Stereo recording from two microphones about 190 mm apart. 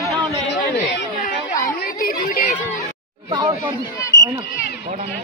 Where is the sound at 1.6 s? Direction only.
45° left (ahead or behind).